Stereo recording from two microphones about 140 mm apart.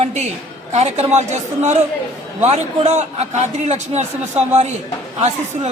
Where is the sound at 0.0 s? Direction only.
55° right (ahead or behind).